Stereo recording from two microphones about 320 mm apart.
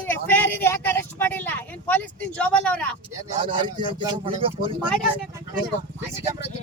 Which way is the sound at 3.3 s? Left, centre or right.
Centre.